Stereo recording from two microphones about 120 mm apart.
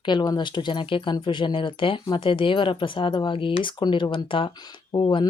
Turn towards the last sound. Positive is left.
turn(degrees=40)  # may be behind; listen again after turning